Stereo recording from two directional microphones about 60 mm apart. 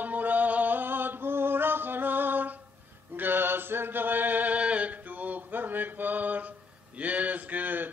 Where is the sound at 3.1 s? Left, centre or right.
Right.